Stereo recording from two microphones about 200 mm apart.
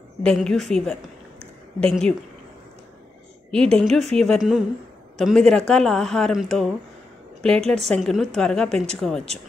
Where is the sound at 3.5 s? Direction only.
5° left (ahead or behind).